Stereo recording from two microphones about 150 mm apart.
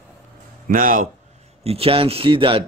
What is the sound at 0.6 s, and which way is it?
Speech, 65° right (ahead or behind).